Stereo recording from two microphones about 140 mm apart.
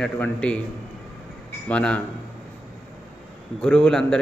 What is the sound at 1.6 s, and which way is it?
Speech, 10° left (ahead or behind).